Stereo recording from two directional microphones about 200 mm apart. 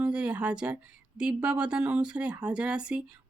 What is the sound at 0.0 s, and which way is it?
Speech, 5° right (ahead or behind).